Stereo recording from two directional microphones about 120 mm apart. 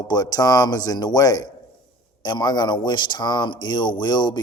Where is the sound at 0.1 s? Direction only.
30° left (ahead or behind).